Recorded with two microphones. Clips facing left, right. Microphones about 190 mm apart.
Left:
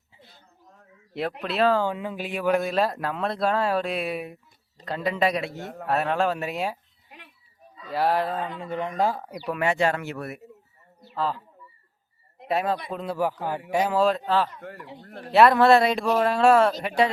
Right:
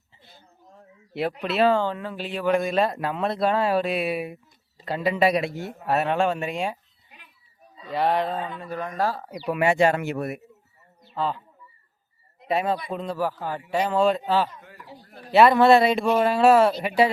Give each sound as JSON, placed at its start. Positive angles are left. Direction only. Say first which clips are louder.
{"t": 0.1, "sound": "a sound", "louder": "left 1 dB", "side_deg": 0}
{"t": 1.1, "sound": "speech", "louder": "right 2 dB", "side_deg": 0}
{"t": 1.9, "sound": "speech", "louder": "even", "side_deg": 15}
{"t": 7.9, "sound": "speech", "louder": "right 1 dB", "side_deg": 5}
{"t": 8.5, "sound": "speech", "louder": "left 2 dB", "side_deg": 20}
{"t": 9.3, "sound": "speech", "louder": "right 3 dB", "side_deg": -10}
{"t": 11.1, "sound": "speech", "louder": "right 1 dB", "side_deg": 0}
{"t": 12.5, "sound": "speech", "louder": "right 1 dB", "side_deg": 0}
{"t": 13.1, "sound": "a man's voice", "louder": "left 1 dB", "side_deg": 15}
{"t": 15.0, "sound": "speech", "louder": "left 5 dB", "side_deg": 65}
{"t": 15.3, "sound": "speech", "louder": "right 1 dB", "side_deg": 0}